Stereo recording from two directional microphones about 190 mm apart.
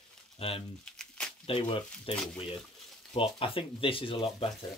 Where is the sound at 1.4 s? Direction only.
30° left (ahead or behind).